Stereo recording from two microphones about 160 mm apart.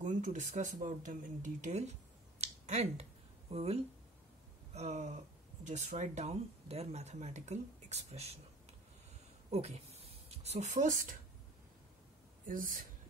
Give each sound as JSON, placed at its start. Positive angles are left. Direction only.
{"t": 0.0, "sound": "speech", "side_deg": -50}
{"t": 2.4, "sound": "finger snapping", "side_deg": -45}
{"t": 4.7, "sound": "speech", "side_deg": -45}
{"t": 9.5, "sound": "speech", "side_deg": -40}
{"t": 12.4, "sound": "speech", "side_deg": -60}